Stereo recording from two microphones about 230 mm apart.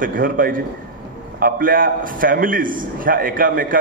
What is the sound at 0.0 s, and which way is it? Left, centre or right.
A man's voice, right.